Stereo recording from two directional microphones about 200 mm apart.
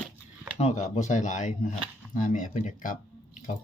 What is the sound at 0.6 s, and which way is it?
Speech, 35° left (ahead or behind).